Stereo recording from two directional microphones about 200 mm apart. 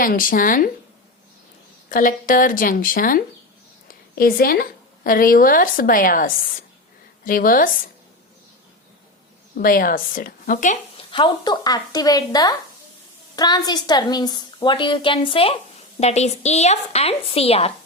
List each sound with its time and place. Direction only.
0.0 s speech: 45° left (ahead or behind)
1.9 s a woman's voice: 40° left (ahead or behind)
9.6 s speech: 45° left (ahead or behind)
10.9 s a woman's voice: 25° left (ahead or behind)